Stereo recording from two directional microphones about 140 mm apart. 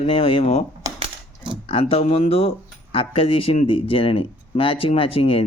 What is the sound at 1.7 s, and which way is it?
Speech, 45° left (ahead or behind).